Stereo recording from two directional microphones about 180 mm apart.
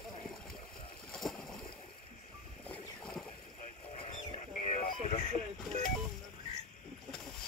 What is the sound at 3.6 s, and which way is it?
Vehicle, 40° left (ahead or behind).